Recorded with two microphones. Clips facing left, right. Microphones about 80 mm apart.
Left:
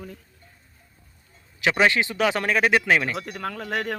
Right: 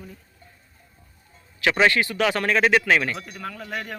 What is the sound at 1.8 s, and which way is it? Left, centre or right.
Speech, centre.